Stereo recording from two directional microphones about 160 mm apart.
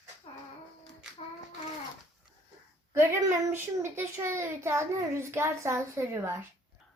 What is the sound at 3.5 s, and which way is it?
A child's voice, 15° right (ahead or behind).